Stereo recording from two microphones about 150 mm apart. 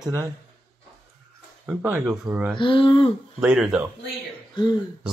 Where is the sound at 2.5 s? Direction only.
35° left (ahead or behind).